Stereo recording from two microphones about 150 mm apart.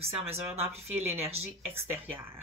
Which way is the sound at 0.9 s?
45° right (ahead or behind).